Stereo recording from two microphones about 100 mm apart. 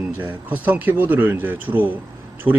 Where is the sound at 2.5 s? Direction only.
60° right (ahead or behind).